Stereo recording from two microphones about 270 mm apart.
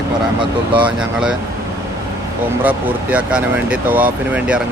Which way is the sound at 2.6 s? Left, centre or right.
Centre.